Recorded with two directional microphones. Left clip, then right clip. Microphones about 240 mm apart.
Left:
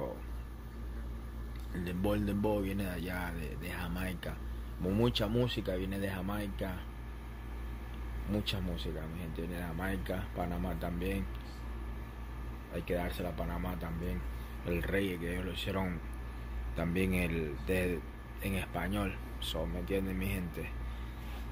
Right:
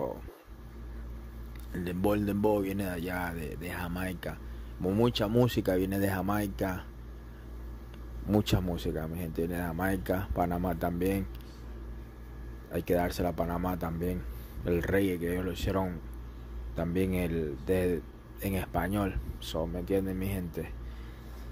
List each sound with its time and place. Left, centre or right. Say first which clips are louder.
1.9 s speech: right 5 dB; right
8.9 s speech: right 8 dB; right
12.7 s speech: right 7 dB; right
16.9 s speech: right 3 dB; right